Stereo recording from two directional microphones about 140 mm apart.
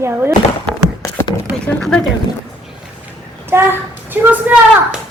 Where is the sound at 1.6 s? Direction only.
5° left (ahead or behind).